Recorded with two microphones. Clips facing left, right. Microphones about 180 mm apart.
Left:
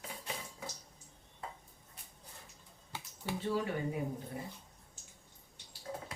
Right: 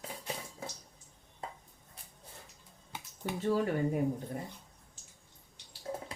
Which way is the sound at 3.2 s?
45° right (ahead or behind).